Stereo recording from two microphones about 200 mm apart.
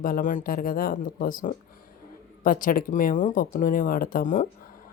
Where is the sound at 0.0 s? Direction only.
40° left (ahead or behind).